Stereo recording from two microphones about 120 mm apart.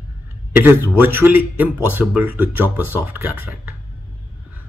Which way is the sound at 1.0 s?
15° right (ahead or behind).